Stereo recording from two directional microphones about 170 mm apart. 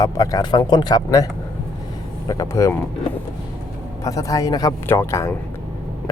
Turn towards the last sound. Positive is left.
turn(degrees=15)  # may be behind; listen again after turning